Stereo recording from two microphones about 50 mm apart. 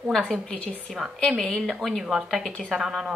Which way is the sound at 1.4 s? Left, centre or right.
Centre.